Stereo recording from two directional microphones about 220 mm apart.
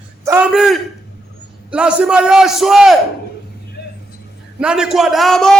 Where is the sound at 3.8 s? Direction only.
50° left (ahead or behind).